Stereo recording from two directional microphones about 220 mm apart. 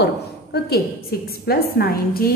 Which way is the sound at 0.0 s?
50° left (ahead or behind).